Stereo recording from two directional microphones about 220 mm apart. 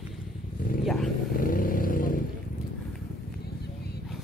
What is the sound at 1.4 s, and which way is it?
Vehicle, 40° left (ahead or behind).